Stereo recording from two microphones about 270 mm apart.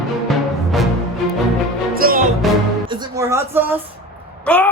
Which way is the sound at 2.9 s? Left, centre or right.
Centre.